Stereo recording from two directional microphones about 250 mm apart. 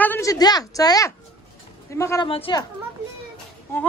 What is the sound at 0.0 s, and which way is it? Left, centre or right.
A woman's voice, centre.